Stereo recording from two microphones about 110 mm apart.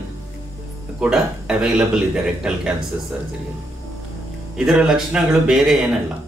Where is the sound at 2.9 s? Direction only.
20° right (ahead or behind).